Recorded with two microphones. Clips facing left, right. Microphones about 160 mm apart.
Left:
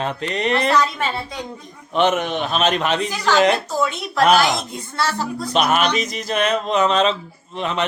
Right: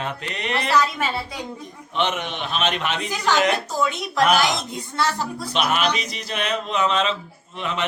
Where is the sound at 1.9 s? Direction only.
45° left (ahead or behind).